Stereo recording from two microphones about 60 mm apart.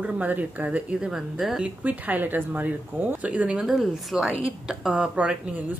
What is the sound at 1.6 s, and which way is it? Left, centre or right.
Speech, right.